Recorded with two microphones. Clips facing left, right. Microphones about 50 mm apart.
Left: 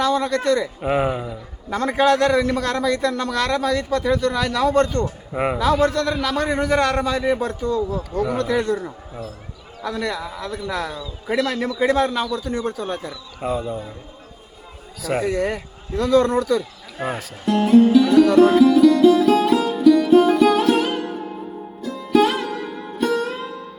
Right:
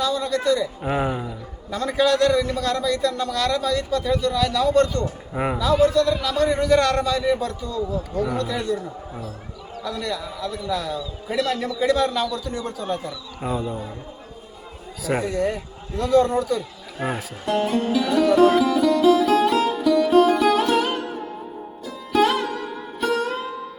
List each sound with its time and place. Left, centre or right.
0.0 s a man's voice: left
0.8 s speech: centre
1.7 s a man's voice: left
5.3 s a man's voice: left
5.5 s a man's voice: left
6.7 s a man's voice: left
8.4 s a man's voice: left
9.8 s a man's voice: left
12.5 s a man's voice: left
13.4 s speech: centre
15.2 s speech: left
17.0 s speech: centre
18.3 s music: centre